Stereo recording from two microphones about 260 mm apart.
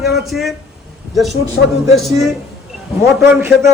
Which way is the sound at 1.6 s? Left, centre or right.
Left.